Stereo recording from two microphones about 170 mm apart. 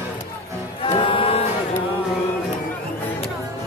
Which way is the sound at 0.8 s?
30° left (ahead or behind).